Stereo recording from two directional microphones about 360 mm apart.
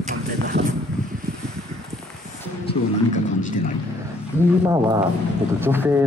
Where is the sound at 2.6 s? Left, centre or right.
Centre.